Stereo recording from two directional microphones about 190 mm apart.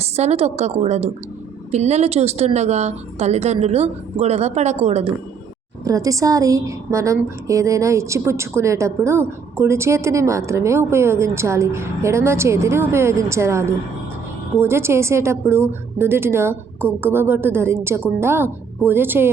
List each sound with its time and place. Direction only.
0.0 s a woman's voice: 35° right (ahead or behind)
5.8 s a woman's voice: 15° right (ahead or behind)